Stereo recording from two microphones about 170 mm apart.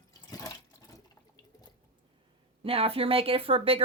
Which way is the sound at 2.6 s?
35° right (ahead or behind).